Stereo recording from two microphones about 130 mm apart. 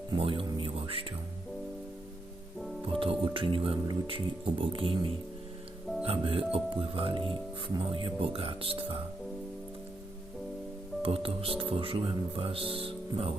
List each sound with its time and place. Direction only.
0.2 s music: 45° right (ahead or behind)
2.8 s music: 45° right (ahead or behind)
3.8 s speech: 40° right (ahead or behind)
11.0 s speech: 45° right (ahead or behind)